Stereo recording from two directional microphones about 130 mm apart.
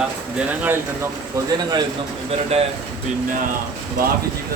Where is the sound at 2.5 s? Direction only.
55° right (ahead or behind).